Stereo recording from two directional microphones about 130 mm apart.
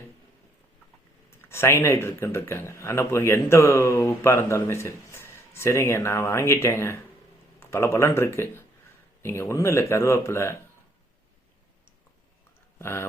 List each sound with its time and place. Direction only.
1.4 s speech: 20° left (ahead or behind)
12.8 s speech: 20° left (ahead or behind)